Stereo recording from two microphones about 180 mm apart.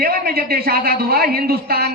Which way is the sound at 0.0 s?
55° right (ahead or behind).